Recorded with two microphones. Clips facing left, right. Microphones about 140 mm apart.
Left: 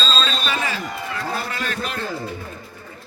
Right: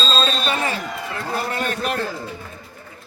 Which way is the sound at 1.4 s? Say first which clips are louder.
Right 4 dB; 45° right (ahead or behind).